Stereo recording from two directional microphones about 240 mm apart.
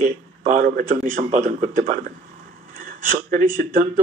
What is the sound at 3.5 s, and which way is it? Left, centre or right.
Speech, right.